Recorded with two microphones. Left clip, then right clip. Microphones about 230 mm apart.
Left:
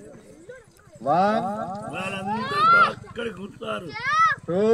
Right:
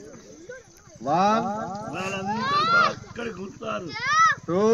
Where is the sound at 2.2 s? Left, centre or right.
Centre.